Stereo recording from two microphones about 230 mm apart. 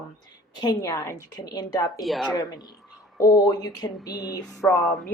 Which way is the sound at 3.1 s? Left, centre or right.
Centre.